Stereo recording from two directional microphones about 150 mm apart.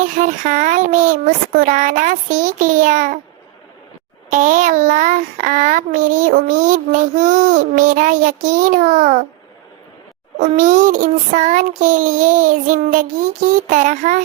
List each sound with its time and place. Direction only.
0.0 s child singing: 55° right (ahead or behind)
4.3 s child singing: 60° right (ahead or behind)
10.4 s child singing: 55° right (ahead or behind)